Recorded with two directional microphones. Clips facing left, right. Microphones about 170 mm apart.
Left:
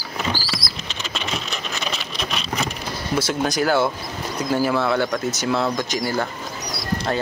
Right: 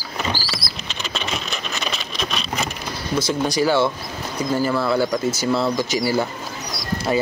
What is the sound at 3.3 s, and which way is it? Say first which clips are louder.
Speech: right 2 dB; centre (ahead or behind).